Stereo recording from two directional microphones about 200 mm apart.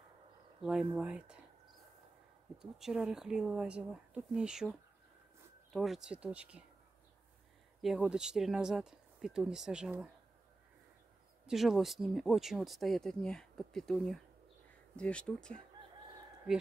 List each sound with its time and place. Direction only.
0.6 s speech: 5° right (ahead or behind)
2.6 s speech: 5° right (ahead or behind)
7.8 s speech: 5° right (ahead or behind)
11.4 s speech: centre (ahead or behind)